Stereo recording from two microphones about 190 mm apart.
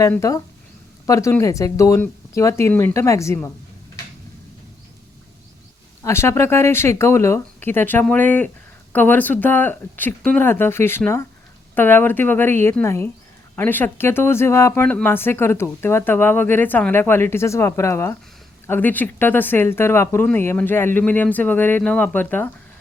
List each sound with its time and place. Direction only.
0.0 s speech: 15° left (ahead or behind)
6.0 s speech: 15° left (ahead or behind)